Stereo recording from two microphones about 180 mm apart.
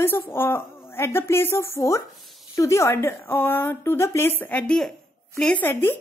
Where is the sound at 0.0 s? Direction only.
10° left (ahead or behind).